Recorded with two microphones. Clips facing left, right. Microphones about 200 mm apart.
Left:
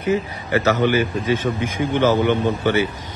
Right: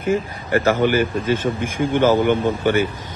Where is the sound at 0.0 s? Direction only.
50° right (ahead or behind).